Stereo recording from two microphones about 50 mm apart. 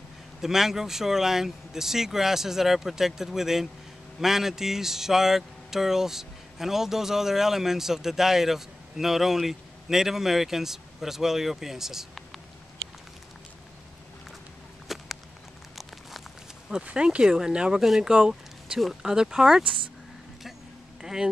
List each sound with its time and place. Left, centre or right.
0.4 s speech: centre
14.9 s a sound: centre
15.7 s crumpling: centre
16.8 s speech: right
17.7 s speech: centre
21.0 s a sound: centre